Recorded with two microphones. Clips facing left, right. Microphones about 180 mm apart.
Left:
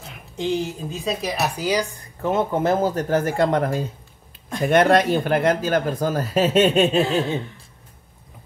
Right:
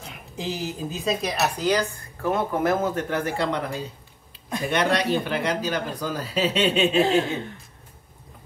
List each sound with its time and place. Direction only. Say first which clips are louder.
0.0 s a woman's voice: left 5 dB; centre (ahead or behind)
1.4 s speech: even; 10° left (ahead or behind)
2.2 s speech: left 3 dB; 25° left (ahead or behind); by 7.0 s 45° left (ahead or behind)